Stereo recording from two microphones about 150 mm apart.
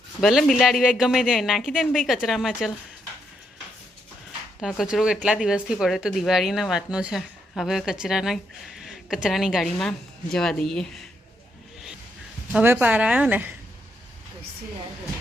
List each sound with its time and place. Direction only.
0.2 s speech: centre (ahead or behind)
4.6 s speech: centre (ahead or behind)
12.5 s speech: 10° right (ahead or behind)